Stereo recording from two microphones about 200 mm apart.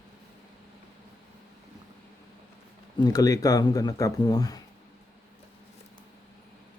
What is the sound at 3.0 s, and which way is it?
Speech, 20° left (ahead or behind).